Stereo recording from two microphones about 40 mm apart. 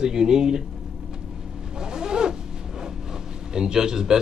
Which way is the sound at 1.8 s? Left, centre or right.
Centre.